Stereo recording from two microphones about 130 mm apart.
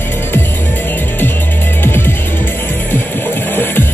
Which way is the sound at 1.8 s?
15° left (ahead or behind).